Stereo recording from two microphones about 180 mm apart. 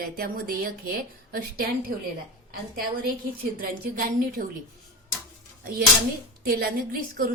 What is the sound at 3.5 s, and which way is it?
Speech, 55° right (ahead or behind).